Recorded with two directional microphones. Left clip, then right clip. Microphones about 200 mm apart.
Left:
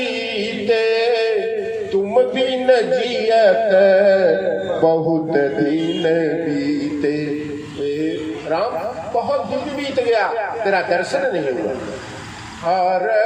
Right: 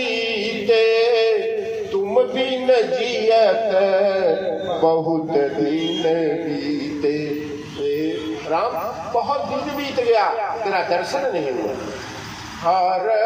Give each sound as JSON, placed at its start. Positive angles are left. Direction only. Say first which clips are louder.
{"t": 0.1, "sound": "a sound", "louder": "even", "side_deg": 45}
{"t": 4.8, "sound": "a man's voice", "louder": "left 2 dB", "side_deg": 45}
{"t": 10.1, "sound": "a man's voice", "louder": "right 2 dB", "side_deg": 45}
{"t": 12.6, "sound": "vehicle", "louder": "left 1 dB", "side_deg": 40}